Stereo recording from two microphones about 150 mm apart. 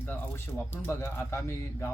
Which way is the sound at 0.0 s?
15° left (ahead or behind).